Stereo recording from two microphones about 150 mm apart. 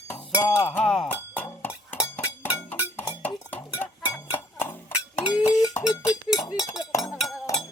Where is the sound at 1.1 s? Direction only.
15° left (ahead or behind).